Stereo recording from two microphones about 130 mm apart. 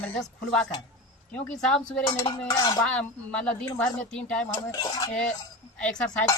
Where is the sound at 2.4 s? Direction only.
30° left (ahead or behind).